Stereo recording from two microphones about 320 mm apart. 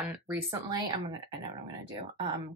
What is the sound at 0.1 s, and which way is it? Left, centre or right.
Speech, centre.